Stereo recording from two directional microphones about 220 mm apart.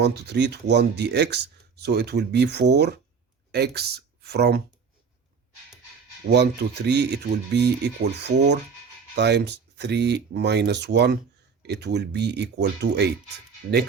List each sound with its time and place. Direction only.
0.0 s speech: 50° right (ahead or behind)
6.2 s speech: 50° right (ahead or behind)